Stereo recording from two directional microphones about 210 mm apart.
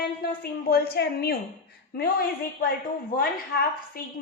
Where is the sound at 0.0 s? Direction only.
45° left (ahead or behind).